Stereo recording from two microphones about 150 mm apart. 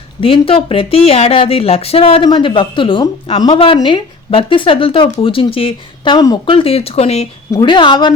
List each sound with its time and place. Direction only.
0.2 s a woman's voice: 35° left (ahead or behind)
7.5 s a woman's voice: 30° left (ahead or behind)